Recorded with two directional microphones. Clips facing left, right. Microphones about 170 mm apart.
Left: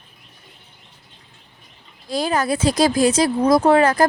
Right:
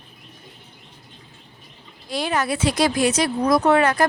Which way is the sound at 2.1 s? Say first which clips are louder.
Left 3 dB; 35° left (ahead or behind).